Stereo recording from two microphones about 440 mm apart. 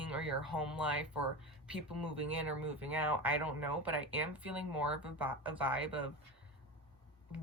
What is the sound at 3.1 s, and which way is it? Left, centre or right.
Speech, centre.